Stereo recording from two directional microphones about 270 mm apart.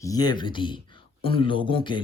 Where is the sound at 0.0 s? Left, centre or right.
Centre.